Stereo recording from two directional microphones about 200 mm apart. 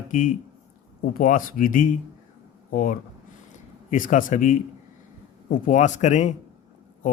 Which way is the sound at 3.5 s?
40° left (ahead or behind).